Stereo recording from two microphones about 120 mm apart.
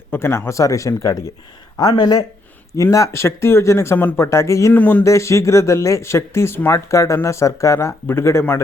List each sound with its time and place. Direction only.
0.1 s speech: 20° left (ahead or behind)
4.8 s speech: 15° left (ahead or behind)
5.0 s speech: 25° left (ahead or behind)